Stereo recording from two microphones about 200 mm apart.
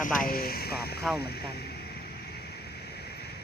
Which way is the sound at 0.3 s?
50° left (ahead or behind).